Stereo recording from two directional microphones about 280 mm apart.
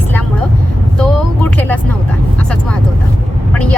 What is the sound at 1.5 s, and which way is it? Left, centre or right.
Vehicle, centre.